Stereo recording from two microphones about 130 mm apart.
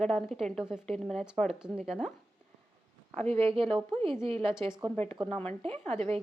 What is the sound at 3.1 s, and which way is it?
Speech, 50° right (ahead or behind).